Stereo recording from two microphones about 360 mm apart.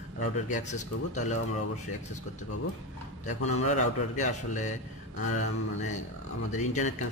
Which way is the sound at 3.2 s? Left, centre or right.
Centre.